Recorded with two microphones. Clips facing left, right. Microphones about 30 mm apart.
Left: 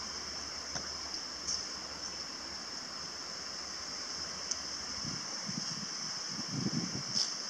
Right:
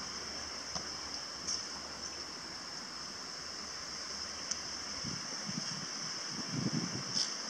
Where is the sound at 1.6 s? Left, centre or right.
Centre.